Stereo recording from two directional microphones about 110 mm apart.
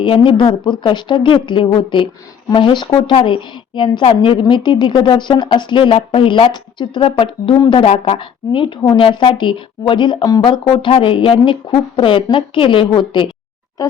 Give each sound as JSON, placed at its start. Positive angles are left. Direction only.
{"t": 0.0, "sound": "a woman's voice", "side_deg": 50}